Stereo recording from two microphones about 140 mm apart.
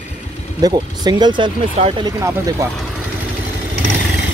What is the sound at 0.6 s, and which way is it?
Speech, 30° right (ahead or behind).